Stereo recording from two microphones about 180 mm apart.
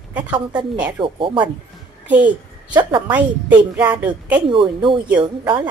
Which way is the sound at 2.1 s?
10° right (ahead or behind).